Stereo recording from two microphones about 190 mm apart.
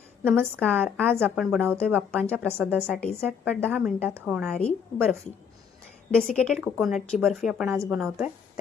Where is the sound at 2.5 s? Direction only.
10° right (ahead or behind).